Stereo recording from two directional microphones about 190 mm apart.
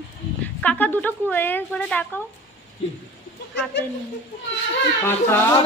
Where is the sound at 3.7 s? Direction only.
65° left (ahead or behind).